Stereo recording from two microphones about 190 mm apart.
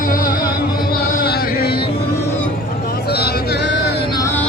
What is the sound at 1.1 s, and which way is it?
Chant, 55° left (ahead or behind).